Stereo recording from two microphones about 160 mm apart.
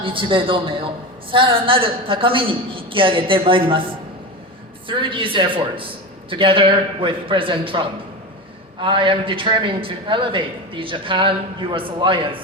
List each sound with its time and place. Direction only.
0.0 s a woman's voice: 35° right (ahead or behind)
4.9 s a woman's voice: 30° right (ahead or behind)
8.8 s a woman's voice: 30° right (ahead or behind)